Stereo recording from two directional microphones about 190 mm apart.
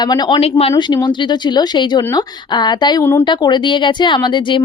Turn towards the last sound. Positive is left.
turn(degrees=25)  # may be behind; listen again after turning